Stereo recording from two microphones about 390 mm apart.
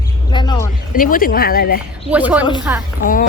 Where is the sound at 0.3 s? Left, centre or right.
Centre.